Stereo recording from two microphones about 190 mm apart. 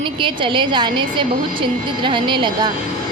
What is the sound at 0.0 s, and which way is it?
A woman's voice, 25° right (ahead or behind).